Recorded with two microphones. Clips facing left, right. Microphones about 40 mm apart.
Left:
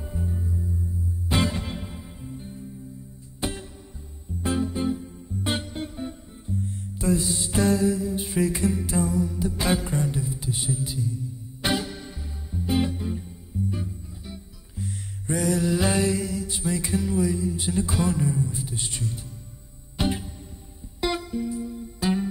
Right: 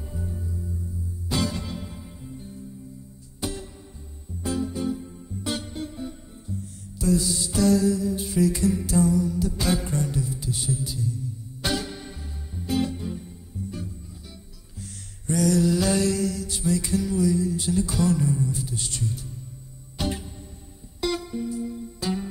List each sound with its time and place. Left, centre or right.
0.1 s music: left
1.3 s music: left
3.3 s music: left